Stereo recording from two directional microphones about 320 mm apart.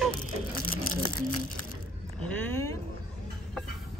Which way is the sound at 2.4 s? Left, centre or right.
Centre.